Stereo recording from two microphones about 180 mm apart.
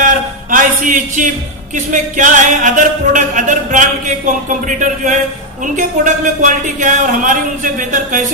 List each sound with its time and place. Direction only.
0.0 s a sound: 50° right (ahead or behind)
1.7 s music: 45° right (ahead or behind)
6.4 s music: 45° right (ahead or behind)